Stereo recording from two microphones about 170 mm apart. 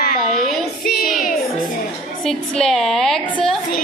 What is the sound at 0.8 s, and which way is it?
Music, 60° left (ahead or behind).